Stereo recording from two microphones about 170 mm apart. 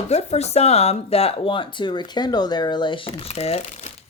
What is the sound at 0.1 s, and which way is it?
Speech, 40° left (ahead or behind).